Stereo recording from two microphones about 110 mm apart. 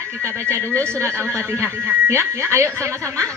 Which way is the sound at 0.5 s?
25° right (ahead or behind).